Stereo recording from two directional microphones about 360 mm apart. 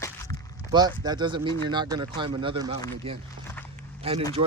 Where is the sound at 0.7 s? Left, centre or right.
Centre.